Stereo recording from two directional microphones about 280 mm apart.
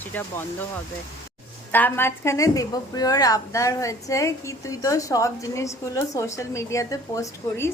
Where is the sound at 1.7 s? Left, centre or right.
Centre.